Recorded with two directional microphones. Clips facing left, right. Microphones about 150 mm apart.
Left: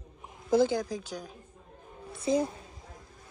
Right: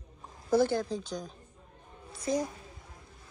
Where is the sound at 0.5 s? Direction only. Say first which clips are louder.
Left 1 dB; 15° left (ahead or behind).